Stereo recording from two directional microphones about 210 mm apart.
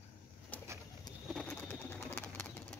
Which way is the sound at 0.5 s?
5° left (ahead or behind).